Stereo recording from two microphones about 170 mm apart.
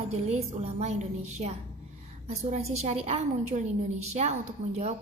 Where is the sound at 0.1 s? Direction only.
40° right (ahead or behind).